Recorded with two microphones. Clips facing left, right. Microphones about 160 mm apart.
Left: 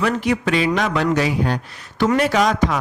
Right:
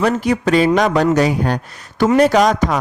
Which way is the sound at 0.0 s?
40° right (ahead or behind).